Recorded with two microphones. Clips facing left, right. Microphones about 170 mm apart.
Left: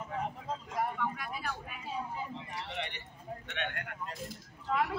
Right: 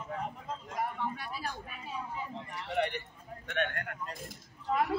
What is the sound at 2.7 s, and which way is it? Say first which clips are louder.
A man's voice: right 9 dB; 50° right (ahead or behind).